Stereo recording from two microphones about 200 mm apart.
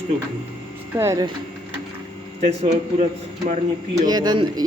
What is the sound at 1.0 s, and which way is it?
Speech, 15° right (ahead or behind).